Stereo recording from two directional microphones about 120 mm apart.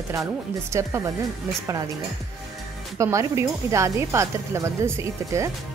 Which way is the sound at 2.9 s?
25° right (ahead or behind).